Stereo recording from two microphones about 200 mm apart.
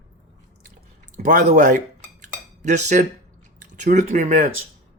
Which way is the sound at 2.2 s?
35° right (ahead or behind).